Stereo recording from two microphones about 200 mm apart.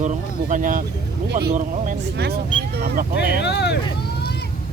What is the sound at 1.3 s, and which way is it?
Speech, 55° right (ahead or behind).